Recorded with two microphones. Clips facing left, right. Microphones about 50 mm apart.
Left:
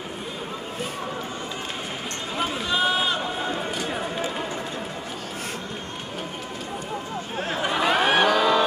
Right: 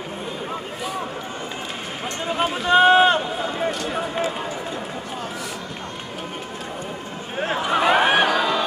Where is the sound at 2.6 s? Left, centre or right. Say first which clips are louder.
Right 11 dB; right.